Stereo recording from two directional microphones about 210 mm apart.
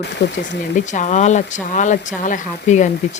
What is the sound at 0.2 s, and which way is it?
Speech, 50° left (ahead or behind).